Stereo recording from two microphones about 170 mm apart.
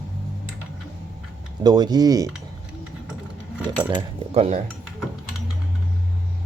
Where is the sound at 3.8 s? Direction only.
30° right (ahead or behind).